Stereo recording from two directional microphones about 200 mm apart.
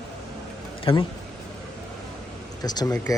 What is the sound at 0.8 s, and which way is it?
Speech, 20° left (ahead or behind).